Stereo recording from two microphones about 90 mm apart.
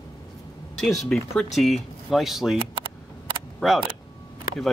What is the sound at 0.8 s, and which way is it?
Speech, centre (ahead or behind).